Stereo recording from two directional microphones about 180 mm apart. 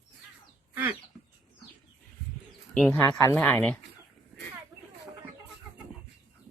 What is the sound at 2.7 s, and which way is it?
Speech, 10° left (ahead or behind).